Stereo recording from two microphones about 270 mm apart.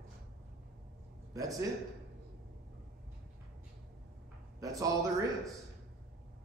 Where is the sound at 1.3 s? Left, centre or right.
Centre.